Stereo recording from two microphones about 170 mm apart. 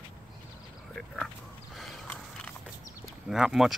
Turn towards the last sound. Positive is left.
turn(degrees=-5)  # may be behind; listen again after turning